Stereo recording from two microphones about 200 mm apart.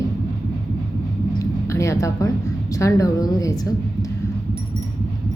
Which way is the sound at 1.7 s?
15° left (ahead or behind).